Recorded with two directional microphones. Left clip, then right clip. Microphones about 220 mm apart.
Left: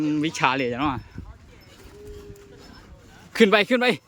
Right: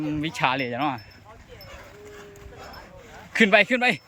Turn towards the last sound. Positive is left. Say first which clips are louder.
# right 1 dB
turn(degrees=10)  # may be behind; listen again after turning